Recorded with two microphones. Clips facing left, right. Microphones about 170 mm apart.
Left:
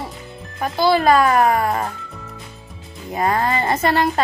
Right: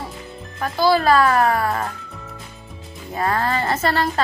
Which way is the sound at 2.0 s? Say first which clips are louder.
Left 1 dB; centre (ahead or behind).